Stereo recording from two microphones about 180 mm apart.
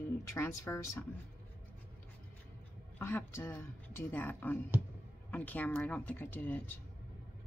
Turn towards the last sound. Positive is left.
turn(degrees=10)  # may be behind; listen again after turning